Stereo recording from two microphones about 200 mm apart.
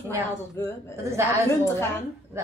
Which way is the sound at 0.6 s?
15° left (ahead or behind).